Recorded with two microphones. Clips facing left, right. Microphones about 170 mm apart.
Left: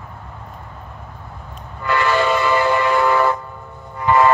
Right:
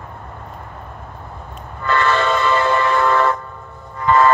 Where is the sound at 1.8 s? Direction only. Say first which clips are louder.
Even; 10° left (ahead or behind).